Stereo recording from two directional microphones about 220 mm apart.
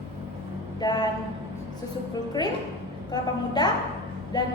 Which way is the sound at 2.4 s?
20° left (ahead or behind).